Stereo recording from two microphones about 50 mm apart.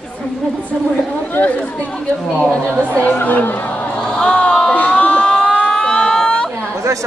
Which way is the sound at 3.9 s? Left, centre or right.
Centre.